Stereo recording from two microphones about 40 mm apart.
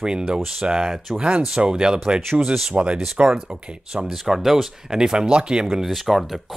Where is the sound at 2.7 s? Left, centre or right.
Right.